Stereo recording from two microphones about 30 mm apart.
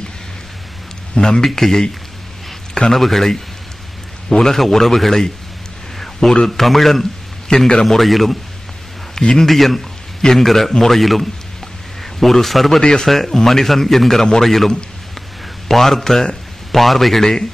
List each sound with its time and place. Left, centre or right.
1.4 s speech: centre
2.9 s speech: centre
4.4 s speech: centre
5.9 s a sound: centre
6.4 s speech: centre
7.4 s a man's voice: left
8.0 s a man's voice: centre
9.4 s a man's voice: centre
15.7 s a man's voice: centre